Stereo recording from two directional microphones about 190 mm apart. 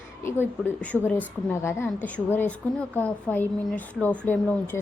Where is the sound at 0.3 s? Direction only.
10° left (ahead or behind).